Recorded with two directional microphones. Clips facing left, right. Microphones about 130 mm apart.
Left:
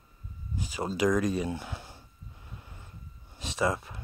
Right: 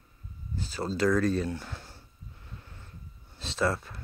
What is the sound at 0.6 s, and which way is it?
Speech, 15° left (ahead or behind).